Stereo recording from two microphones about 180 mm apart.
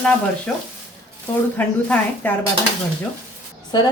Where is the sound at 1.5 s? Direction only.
10° left (ahead or behind).